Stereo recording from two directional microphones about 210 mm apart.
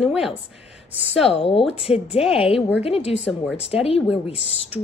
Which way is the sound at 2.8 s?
30° left (ahead or behind).